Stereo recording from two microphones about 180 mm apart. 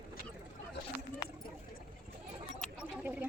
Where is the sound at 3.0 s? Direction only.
10° right (ahead or behind).